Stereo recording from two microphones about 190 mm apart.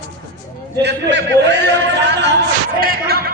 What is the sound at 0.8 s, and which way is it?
Speech, 65° right (ahead or behind).